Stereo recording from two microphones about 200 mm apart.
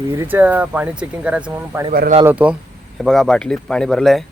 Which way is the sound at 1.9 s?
45° right (ahead or behind).